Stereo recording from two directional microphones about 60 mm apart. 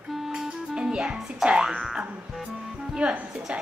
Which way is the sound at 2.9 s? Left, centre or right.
Centre.